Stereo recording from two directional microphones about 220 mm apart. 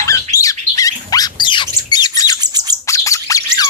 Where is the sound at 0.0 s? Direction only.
15° left (ahead or behind).